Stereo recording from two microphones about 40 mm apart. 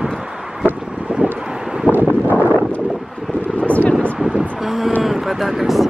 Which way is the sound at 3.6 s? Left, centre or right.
Left.